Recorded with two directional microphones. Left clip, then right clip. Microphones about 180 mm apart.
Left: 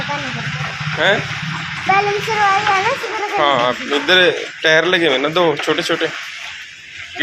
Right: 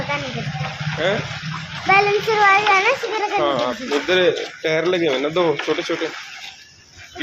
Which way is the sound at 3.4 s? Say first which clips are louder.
Left 8 dB; 5° left (ahead or behind).